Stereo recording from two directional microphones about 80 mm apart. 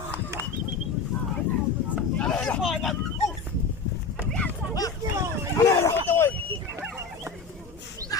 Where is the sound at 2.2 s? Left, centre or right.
Centre.